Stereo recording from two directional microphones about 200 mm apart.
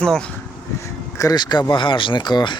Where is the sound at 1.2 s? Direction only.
20° left (ahead or behind).